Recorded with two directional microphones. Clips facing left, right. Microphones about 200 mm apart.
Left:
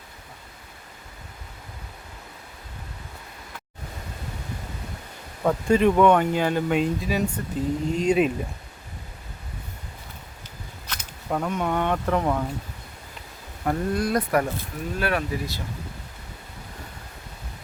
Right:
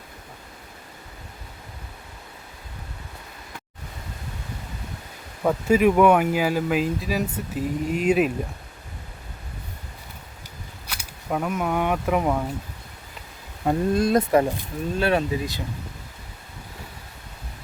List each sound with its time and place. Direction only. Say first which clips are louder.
5.4 s speech: right 1 dB; 5° right (ahead or behind)
10.8 s speech: even; 5° right (ahead or behind)
13.7 s speech: right 4 dB; 25° right (ahead or behind)